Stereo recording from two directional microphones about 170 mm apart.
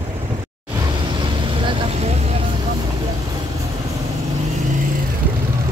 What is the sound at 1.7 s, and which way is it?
Vehicle, 35° right (ahead or behind).